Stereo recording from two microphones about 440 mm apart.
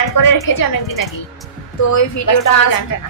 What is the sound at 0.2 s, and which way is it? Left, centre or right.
A woman's voice, left.